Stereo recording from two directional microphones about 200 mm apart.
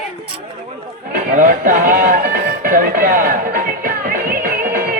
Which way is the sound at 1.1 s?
45° right (ahead or behind).